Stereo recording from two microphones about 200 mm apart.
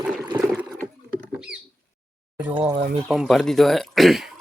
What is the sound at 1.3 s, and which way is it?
Bird, 5° right (ahead or behind).